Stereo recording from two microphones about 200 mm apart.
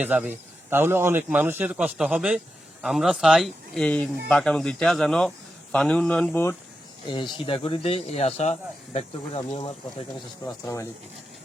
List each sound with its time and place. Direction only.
0.0 s a man's voice: 5° right (ahead or behind); by 6.6 s 10° left (ahead or behind)
7.1 s speech: 25° left (ahead or behind)
10.4 s speech: 15° left (ahead or behind)